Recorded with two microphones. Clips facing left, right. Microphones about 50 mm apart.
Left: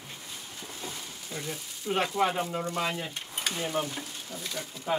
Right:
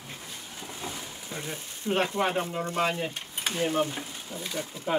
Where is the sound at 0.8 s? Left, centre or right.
Right.